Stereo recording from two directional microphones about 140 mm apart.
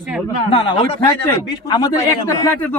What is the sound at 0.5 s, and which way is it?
Speech, 40° left (ahead or behind).